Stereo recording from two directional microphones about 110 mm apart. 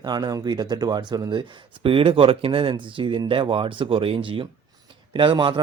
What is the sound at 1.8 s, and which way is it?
Speech, 55° right (ahead or behind).